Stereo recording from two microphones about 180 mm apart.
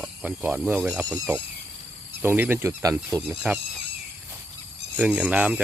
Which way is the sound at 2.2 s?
10° right (ahead or behind).